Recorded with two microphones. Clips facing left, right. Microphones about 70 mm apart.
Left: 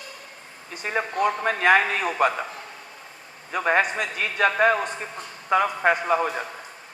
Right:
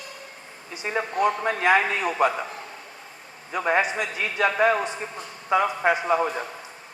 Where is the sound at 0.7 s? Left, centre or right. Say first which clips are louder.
Left 1 dB; left.